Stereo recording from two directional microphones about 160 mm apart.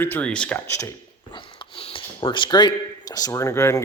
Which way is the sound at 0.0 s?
10° left (ahead or behind).